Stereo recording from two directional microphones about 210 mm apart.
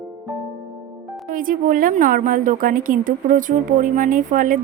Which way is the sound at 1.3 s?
40° right (ahead or behind).